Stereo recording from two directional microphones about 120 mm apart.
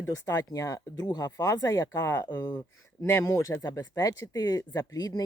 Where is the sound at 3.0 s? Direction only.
20° left (ahead or behind).